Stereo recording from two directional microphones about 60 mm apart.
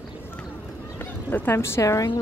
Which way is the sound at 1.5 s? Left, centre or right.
Left.